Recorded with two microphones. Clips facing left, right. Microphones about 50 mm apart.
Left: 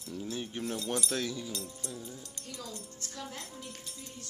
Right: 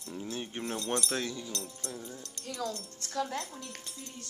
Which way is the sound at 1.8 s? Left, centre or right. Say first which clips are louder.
Right 1 dB; right.